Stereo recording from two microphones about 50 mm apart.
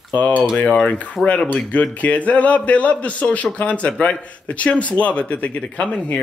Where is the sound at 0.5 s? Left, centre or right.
Left.